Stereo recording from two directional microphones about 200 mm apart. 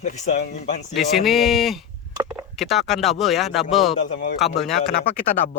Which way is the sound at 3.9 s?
40° left (ahead or behind).